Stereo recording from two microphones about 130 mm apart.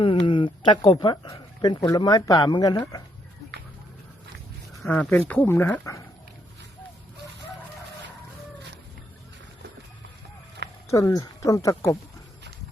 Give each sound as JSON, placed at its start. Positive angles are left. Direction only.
{"t": 0.0, "sound": "speech", "side_deg": 40}
{"t": 4.8, "sound": "speech", "side_deg": 10}
{"t": 10.8, "sound": "speech", "side_deg": 25}